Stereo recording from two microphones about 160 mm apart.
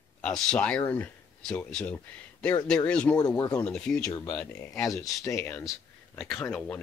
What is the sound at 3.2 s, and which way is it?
Speech, 25° left (ahead or behind).